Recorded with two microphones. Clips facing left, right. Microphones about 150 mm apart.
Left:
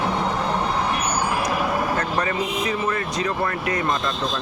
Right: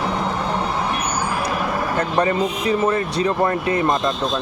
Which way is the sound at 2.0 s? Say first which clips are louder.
Right 5 dB; 30° right (ahead or behind).